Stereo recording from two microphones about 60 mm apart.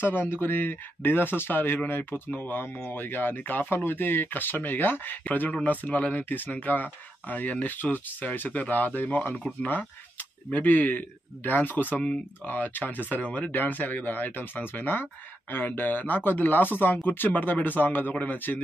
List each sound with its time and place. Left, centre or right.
0.0 s speech: left